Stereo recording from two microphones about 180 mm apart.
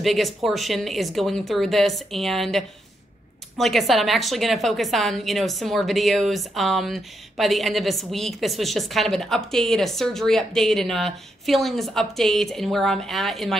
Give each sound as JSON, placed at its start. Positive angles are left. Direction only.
{"t": 0.0, "sound": "a woman's voice", "side_deg": 0}